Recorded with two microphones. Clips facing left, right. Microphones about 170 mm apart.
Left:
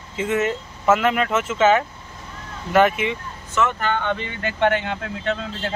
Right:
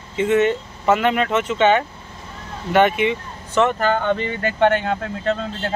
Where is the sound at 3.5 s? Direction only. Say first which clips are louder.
Right 4 dB; 35° right (ahead or behind).